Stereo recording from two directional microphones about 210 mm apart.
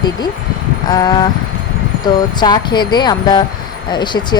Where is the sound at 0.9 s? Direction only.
20° left (ahead or behind).